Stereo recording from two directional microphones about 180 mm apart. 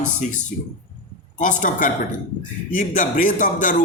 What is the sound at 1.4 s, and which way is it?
A man's voice, 45° left (ahead or behind).